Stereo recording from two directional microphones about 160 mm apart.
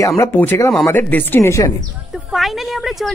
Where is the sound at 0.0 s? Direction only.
20° left (ahead or behind).